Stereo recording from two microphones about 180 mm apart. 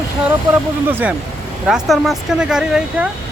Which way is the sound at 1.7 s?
Centre (ahead or behind).